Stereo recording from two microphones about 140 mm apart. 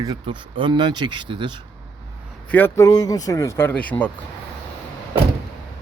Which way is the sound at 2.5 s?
15° left (ahead or behind).